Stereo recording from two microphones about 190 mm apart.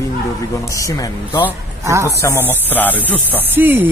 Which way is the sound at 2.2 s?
15° left (ahead or behind).